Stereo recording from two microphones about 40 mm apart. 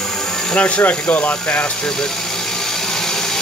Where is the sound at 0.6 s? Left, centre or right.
Left.